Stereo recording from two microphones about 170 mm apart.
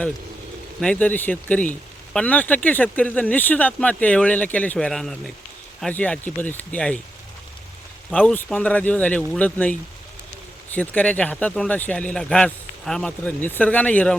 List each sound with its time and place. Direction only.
0.8 s speech: 5° left (ahead or behind)
8.1 s speech: 5° left (ahead or behind)
10.8 s speech: 10° left (ahead or behind)